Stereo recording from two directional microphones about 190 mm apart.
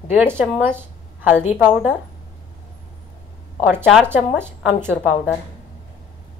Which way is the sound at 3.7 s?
5° right (ahead or behind).